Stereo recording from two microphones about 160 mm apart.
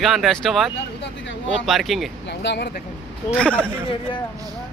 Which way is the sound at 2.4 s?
90° left.